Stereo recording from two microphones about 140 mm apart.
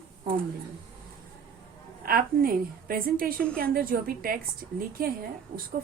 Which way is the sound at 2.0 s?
90° right.